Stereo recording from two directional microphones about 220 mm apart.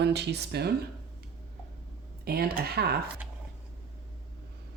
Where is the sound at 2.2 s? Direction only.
45° right (ahead or behind).